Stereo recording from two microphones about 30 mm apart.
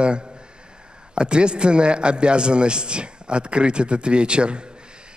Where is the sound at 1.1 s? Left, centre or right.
Right.